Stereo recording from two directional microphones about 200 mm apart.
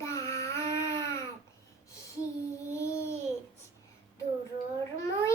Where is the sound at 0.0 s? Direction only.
15° left (ahead or behind).